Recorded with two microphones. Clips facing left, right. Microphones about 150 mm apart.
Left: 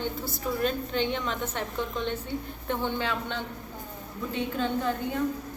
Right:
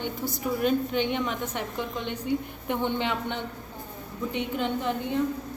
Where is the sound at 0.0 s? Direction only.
15° right (ahead or behind).